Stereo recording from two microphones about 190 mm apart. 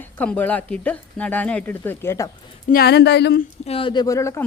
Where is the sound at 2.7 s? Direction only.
55° left (ahead or behind).